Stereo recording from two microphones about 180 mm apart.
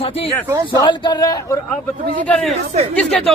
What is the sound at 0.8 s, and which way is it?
Speech, 25° left (ahead or behind).